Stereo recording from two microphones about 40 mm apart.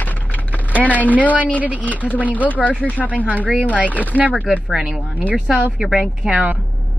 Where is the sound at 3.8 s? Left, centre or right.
Left.